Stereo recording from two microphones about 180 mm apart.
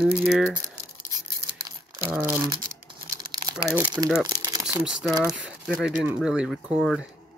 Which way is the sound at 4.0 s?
Centre (ahead or behind).